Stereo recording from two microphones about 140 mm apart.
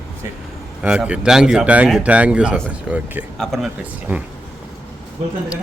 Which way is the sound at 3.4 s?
Centre (ahead or behind).